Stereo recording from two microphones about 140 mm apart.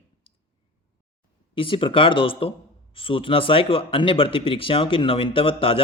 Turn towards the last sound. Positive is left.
turn(degrees=40)  # may be behind; listen again after turning